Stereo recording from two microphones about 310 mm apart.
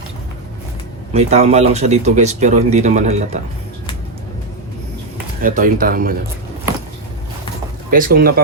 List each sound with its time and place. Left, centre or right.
1.1 s speech: centre
5.4 s speech: right
7.9 s speech: right